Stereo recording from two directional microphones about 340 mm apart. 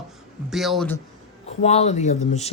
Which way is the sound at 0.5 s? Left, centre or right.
Centre.